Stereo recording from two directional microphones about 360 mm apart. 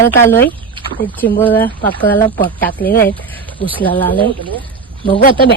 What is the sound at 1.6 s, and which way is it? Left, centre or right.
Speech, left.